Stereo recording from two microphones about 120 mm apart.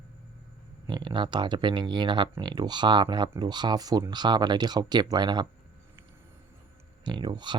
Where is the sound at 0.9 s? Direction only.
40° right (ahead or behind).